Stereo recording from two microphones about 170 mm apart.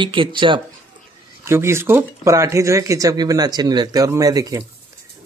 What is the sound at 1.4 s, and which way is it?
Speech, 15° right (ahead or behind).